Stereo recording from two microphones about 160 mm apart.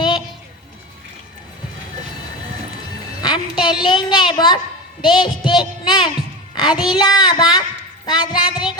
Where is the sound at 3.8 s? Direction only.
30° left (ahead or behind).